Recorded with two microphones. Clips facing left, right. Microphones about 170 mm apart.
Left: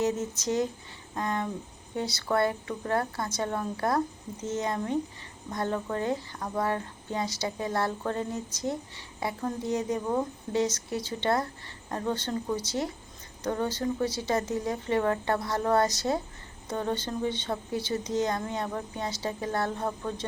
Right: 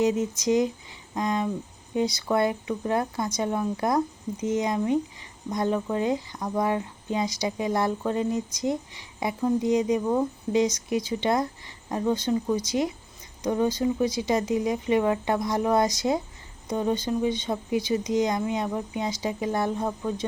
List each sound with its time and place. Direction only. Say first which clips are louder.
0.0 s speech: right 5 dB; 15° right (ahead or behind)